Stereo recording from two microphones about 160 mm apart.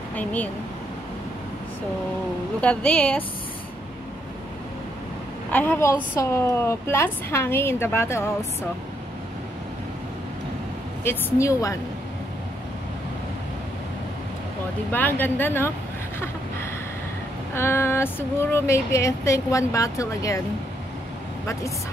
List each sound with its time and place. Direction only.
0.1 s speech: 10° left (ahead or behind)
2.6 s speech: 10° left (ahead or behind)
5.5 s speech: 10° left (ahead or behind)
11.1 s a woman's voice: 15° left (ahead or behind)
14.9 s speech: 10° left (ahead or behind)
17.6 s speech: 15° left (ahead or behind)